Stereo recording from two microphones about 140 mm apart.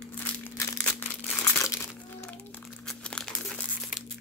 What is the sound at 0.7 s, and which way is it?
Crumpling, 10° left (ahead or behind).